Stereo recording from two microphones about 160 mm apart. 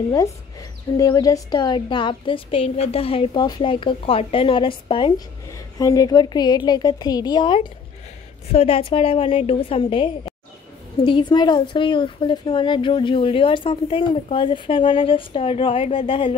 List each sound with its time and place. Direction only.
0.1 s a woman's voice: 20° left (ahead or behind)